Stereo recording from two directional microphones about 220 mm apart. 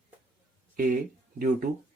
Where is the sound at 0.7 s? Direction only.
40° right (ahead or behind).